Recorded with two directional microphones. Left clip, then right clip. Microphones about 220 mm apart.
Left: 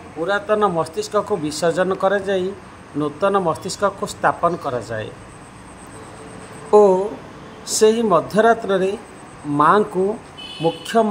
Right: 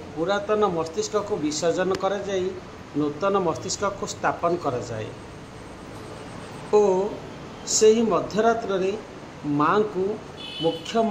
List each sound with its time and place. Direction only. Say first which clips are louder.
0.2 s a man's voice: left 4 dB; 15° left (ahead or behind)
6.7 s a sound: left 7 dB; 20° left (ahead or behind)
7.7 s speech: left 4 dB; 20° left (ahead or behind)
10.9 s a man's voice: left 7 dB; 15° left (ahead or behind)